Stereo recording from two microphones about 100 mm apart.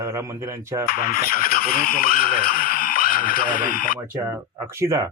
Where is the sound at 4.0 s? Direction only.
35° right (ahead or behind).